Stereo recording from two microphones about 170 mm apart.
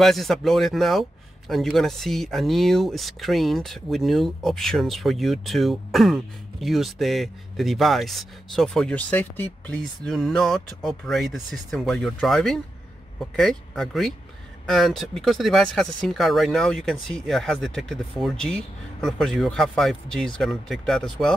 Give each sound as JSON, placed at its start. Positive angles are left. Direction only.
{"t": 0.0, "sound": "speech", "side_deg": 0}